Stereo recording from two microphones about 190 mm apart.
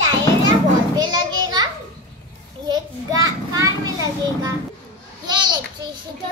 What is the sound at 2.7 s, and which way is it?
Children playing, 20° right (ahead or behind).